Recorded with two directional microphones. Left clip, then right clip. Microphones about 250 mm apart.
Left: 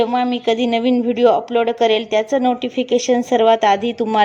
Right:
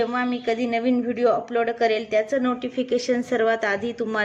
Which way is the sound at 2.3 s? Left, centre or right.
Centre.